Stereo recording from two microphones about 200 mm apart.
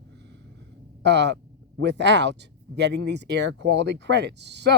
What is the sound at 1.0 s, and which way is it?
Speech, 60° right (ahead or behind).